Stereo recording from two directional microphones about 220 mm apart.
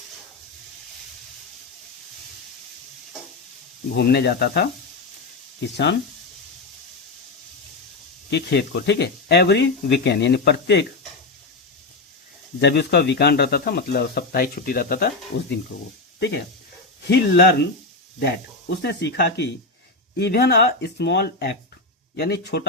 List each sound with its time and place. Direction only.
3.9 s speech: 50° left (ahead or behind)
8.3 s speech: 50° left (ahead or behind)
12.5 s speech: 50° left (ahead or behind)
17.1 s speech: 50° left (ahead or behind)
18.8 s speech: 50° left (ahead or behind)